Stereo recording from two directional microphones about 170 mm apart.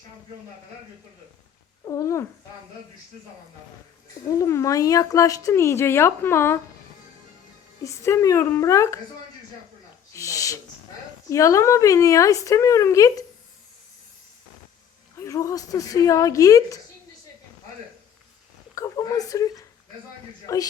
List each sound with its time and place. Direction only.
1.8 s cat: 20° left (ahead or behind)
4.3 s speech: 20° left (ahead or behind)
7.9 s speech: 15° left (ahead or behind)
10.1 s a sound: 20° left (ahead or behind)
11.3 s a woman's voice: 20° left (ahead or behind)
15.1 s a woman's voice: 20° left (ahead or behind)
18.7 s a woman's voice: 20° left (ahead or behind)